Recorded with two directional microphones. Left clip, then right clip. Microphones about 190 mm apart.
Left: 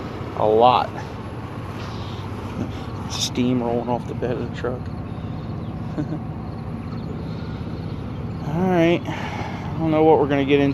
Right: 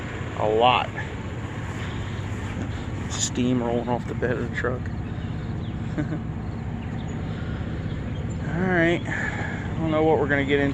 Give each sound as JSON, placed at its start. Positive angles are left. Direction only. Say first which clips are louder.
{"t": 0.3, "sound": "speech", "louder": "left 4 dB", "side_deg": 35}
{"t": 3.2, "sound": "speech", "louder": "left 3 dB", "side_deg": 20}
{"t": 8.5, "sound": "speech", "louder": "left 3 dB", "side_deg": 30}